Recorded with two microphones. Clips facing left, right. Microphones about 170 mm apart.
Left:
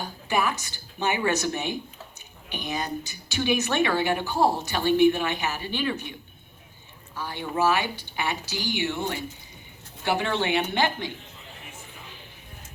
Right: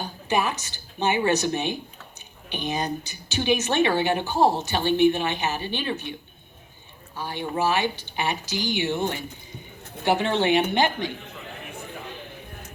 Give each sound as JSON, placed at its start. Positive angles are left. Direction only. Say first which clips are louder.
{"t": 0.3, "sound": "speech", "louder": "right 1 dB", "side_deg": -20}
{"t": 7.2, "sound": "speech", "louder": "even", "side_deg": -20}
{"t": 11.2, "sound": "a sound", "louder": "right 7 dB", "side_deg": -65}